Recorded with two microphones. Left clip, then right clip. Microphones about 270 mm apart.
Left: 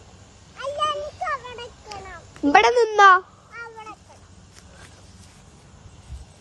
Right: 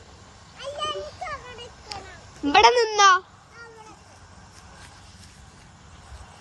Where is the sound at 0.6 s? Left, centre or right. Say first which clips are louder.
Left 5 dB; left.